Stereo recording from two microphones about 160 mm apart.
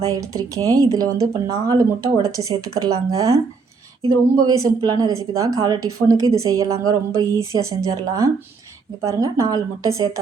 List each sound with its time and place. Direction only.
0.0 s speech: 20° right (ahead or behind)